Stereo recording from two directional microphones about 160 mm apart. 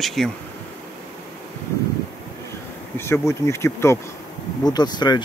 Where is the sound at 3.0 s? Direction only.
15° left (ahead or behind).